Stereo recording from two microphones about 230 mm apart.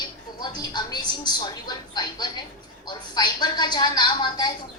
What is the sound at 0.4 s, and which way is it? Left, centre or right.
Speech, centre.